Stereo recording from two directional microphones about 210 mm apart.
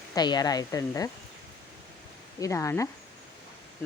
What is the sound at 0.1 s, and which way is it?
Speech, 20° left (ahead or behind).